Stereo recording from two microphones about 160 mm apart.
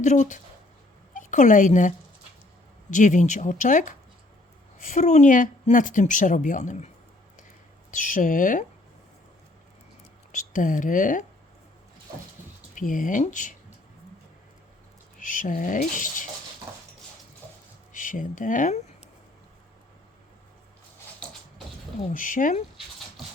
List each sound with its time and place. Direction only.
0.0 s a woman's voice: 50° left (ahead or behind)
2.9 s a woman's voice: 50° left (ahead or behind)
10.3 s speech: 55° left (ahead or behind)
12.7 s speech: 55° left (ahead or behind)
15.2 s speech: 55° left (ahead or behind)
17.9 s speech: 55° left (ahead or behind)
22.1 s speech: 55° left (ahead or behind)